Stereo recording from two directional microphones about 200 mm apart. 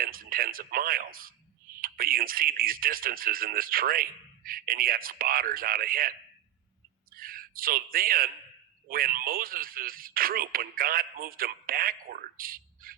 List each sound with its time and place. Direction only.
0.0 s a man's voice: 45° right (ahead or behind)